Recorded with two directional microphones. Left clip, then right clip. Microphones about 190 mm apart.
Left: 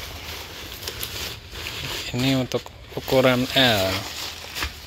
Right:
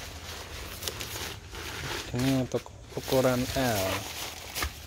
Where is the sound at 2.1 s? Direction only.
Centre (ahead or behind).